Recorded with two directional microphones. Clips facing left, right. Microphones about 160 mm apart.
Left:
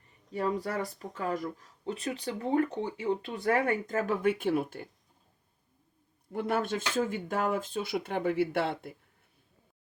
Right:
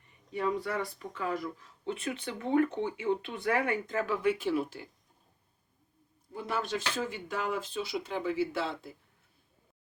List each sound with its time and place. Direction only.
0.3 s speech: 40° left (ahead or behind)
6.3 s speech: 55° left (ahead or behind)